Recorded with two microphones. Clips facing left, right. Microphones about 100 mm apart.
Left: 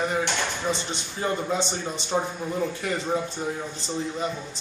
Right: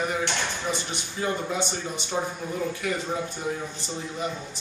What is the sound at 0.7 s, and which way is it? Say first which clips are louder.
A man's voice: left 1 dB; 30° left (ahead or behind).